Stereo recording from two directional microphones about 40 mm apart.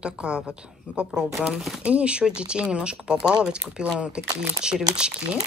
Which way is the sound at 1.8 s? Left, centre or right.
Right.